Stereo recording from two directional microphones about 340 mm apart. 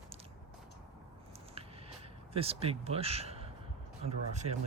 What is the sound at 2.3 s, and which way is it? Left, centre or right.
Speech, centre.